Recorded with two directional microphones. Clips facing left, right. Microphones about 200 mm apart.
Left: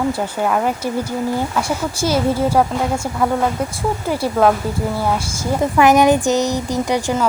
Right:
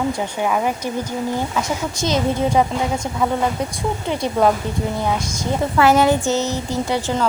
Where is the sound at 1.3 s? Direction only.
10° left (ahead or behind).